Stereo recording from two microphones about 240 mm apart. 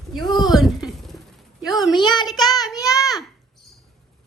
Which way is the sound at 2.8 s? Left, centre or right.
Centre.